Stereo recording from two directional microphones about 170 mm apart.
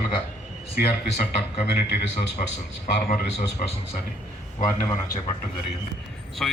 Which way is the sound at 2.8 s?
65° left (ahead or behind).